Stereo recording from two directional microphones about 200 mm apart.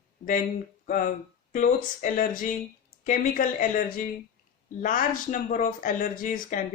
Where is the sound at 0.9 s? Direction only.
40° left (ahead or behind).